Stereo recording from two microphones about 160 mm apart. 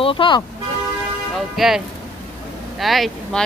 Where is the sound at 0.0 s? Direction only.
35° left (ahead or behind).